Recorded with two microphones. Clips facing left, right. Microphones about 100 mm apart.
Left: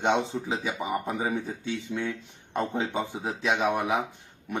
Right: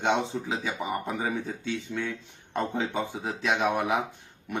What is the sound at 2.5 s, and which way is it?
Speech, centre (ahead or behind).